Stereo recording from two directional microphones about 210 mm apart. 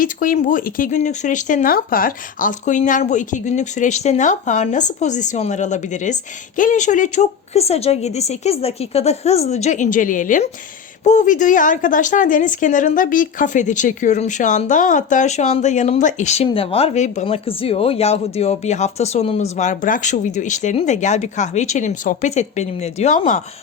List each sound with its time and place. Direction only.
0.0 s a woman's voice: 40° left (ahead or behind)